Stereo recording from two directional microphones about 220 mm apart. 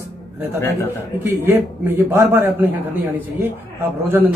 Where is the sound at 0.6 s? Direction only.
10° left (ahead or behind).